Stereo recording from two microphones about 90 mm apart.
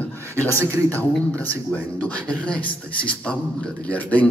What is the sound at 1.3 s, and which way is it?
A man's voice, 20° left (ahead or behind).